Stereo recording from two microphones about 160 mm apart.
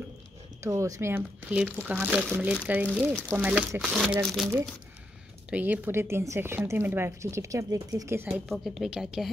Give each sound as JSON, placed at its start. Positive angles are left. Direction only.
{"t": 0.7, "sound": "a woman's voice", "side_deg": -20}
{"t": 8.3, "sound": "a woman's voice", "side_deg": 0}